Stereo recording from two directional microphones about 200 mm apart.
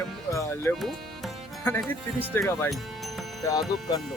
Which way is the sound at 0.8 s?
Centre (ahead or behind).